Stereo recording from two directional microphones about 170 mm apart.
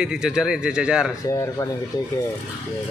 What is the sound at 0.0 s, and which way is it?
Speech, 5° right (ahead or behind).